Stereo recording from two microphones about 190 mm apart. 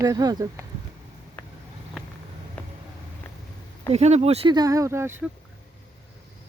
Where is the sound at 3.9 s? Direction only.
35° right (ahead or behind); by 5.1 s 15° right (ahead or behind).